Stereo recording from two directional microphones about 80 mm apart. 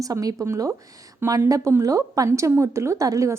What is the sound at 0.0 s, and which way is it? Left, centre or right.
A woman's voice, right.